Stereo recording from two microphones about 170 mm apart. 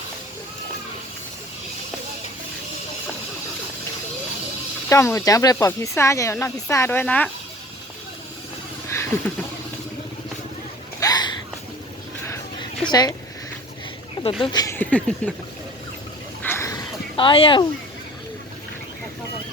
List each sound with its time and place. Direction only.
4.9 s speech: 15° left (ahead or behind)
8.9 s a sound: 15° left (ahead or behind)
11.0 s a sound: 25° left (ahead or behind)
12.2 s music: 15° left (ahead or behind)
12.9 s speech: 25° left (ahead or behind)
14.4 s speech: 25° left (ahead or behind)
14.8 s speech: 10° left (ahead or behind)
16.4 s a sound: 15° left (ahead or behind)
17.2 s speech: 30° left (ahead or behind)